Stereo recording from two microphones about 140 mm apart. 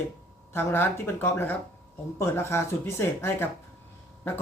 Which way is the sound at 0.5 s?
15° left (ahead or behind).